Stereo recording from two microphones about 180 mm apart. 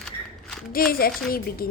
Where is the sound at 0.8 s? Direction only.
55° left (ahead or behind).